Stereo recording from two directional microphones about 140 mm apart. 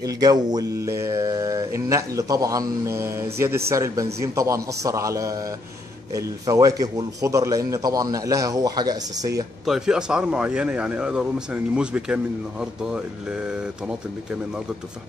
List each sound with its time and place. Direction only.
0.0 s speech: 30° right (ahead or behind)
9.7 s speech: 5° right (ahead or behind)